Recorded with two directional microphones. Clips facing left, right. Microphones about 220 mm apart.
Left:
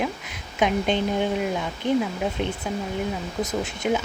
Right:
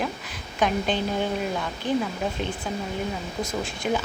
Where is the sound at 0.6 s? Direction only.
20° left (ahead or behind).